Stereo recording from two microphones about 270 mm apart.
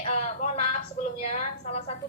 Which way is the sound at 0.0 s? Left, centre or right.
Left.